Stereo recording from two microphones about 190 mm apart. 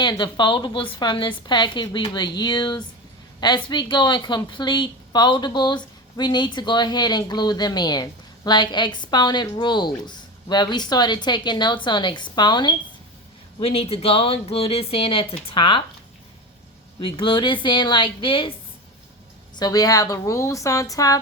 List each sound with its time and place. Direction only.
0.0 s speech: 25° left (ahead or behind)
17.2 s speech: 25° left (ahead or behind)
19.5 s a woman's voice: 20° left (ahead or behind)